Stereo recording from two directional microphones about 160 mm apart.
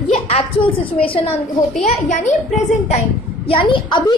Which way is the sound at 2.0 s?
50° left (ahead or behind).